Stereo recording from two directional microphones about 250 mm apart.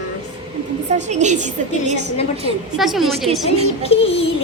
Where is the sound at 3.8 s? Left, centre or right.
Left.